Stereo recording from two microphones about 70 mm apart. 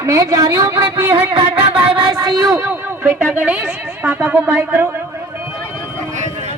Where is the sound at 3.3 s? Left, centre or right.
Right.